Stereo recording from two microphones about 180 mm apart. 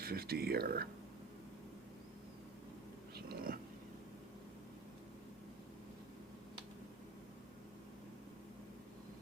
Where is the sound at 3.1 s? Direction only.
55° right (ahead or behind).